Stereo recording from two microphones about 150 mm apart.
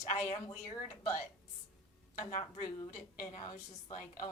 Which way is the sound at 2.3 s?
45° left (ahead or behind).